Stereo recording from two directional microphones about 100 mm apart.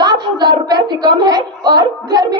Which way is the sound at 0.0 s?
45° right (ahead or behind).